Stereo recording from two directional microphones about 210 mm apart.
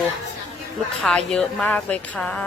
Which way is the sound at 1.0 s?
Centre (ahead or behind).